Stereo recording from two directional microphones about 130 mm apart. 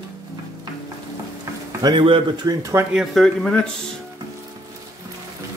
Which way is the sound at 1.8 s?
40° right (ahead or behind).